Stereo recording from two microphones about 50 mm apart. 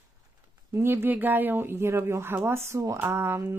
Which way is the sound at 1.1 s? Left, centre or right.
Right.